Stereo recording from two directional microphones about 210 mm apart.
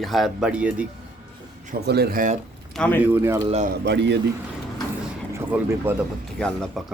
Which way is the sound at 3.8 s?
55° right (ahead or behind).